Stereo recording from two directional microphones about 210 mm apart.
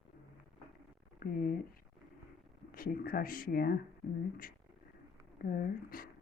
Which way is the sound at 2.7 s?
45° left (ahead or behind).